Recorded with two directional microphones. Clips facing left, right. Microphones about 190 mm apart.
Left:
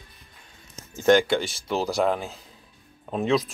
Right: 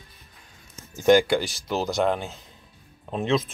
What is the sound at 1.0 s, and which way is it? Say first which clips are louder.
Speech: right 1 dB; 5° right (ahead or behind).